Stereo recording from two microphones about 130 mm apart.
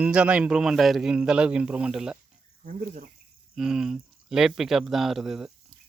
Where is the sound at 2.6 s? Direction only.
90° right.